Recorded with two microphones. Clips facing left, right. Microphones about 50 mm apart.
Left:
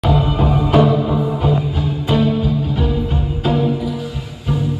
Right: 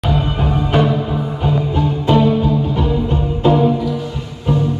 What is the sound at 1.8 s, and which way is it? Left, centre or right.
Music, centre.